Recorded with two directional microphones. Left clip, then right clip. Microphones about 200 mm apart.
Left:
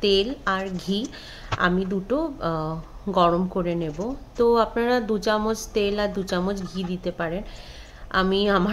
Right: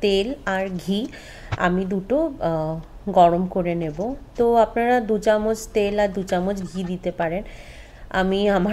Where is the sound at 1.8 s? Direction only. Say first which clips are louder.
Right 4 dB; 10° right (ahead or behind).